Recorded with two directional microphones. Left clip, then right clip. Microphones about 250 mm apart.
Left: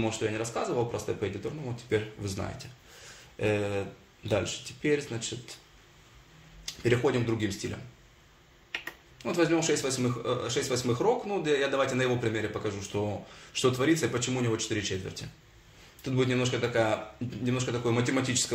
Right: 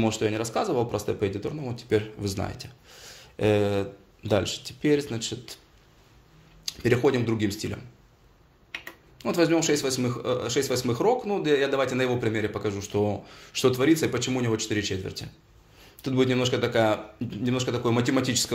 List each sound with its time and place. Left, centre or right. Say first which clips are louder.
0.0 s speech: right 5 dB; right
6.6 s speech: right 4 dB; right
9.2 s speech: right 4 dB; right